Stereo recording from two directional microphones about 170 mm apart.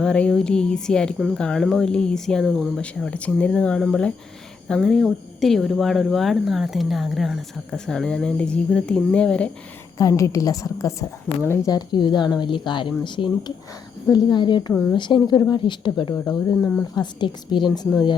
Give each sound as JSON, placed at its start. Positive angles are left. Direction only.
{"t": 0.0, "sound": "speech", "side_deg": 5}
{"t": 10.0, "sound": "speech", "side_deg": 20}
{"t": 14.7, "sound": "speech", "side_deg": 5}
{"t": 14.9, "sound": "speech", "side_deg": 25}
{"t": 16.1, "sound": "speech", "side_deg": 10}
{"t": 16.9, "sound": "speech", "side_deg": 25}